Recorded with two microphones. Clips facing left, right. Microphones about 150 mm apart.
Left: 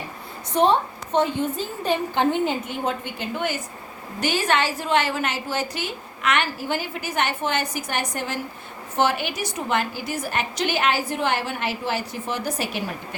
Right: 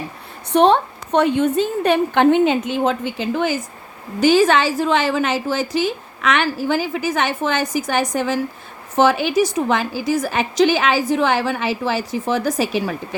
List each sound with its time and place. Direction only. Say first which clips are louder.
0.5 s a woman's voice: right 5 dB; 70° right (ahead or behind); by 13.0 s 90° right